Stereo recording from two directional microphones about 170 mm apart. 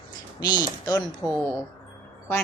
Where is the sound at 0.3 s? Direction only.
25° left (ahead or behind).